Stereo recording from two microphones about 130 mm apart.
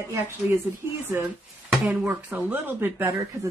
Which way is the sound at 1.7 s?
5° right (ahead or behind).